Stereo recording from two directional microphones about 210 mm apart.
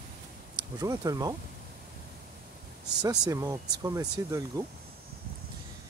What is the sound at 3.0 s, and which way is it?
Speech, 15° right (ahead or behind).